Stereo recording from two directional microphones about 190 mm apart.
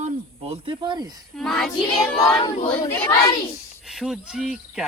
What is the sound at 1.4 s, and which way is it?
Speech, centre (ahead or behind).